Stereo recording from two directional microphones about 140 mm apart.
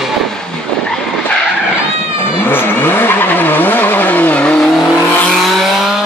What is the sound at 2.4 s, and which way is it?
Vehicle, 15° left (ahead or behind).